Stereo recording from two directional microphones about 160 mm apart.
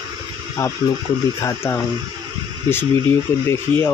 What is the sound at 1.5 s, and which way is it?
Speech, 15° left (ahead or behind).